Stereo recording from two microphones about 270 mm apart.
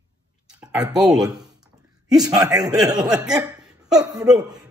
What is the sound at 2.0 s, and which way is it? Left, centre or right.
Speech, centre.